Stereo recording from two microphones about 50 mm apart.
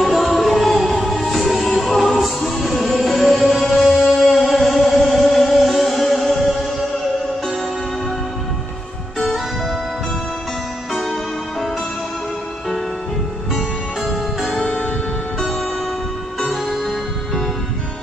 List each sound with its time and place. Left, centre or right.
0.0 s music: centre
10.9 s music: centre
13.5 s music: centre
14.6 s music: centre
16.6 s music: centre